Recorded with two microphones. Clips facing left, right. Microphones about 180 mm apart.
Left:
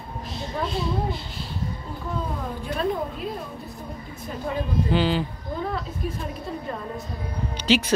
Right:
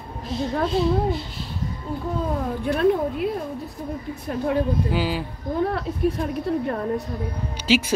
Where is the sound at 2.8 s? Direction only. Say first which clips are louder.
Right 6 dB; 65° right (ahead or behind).